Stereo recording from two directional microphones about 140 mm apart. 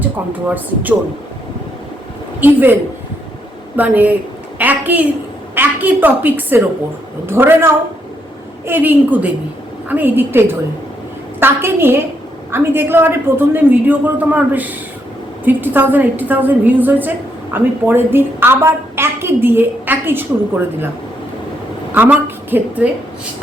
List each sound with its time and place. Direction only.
0.4 s a woman's voice: 10° right (ahead or behind)
2.4 s a woman's voice: 15° right (ahead or behind)
3.8 s a woman's voice: 10° right (ahead or behind)
21.9 s a woman's voice: 15° right (ahead or behind)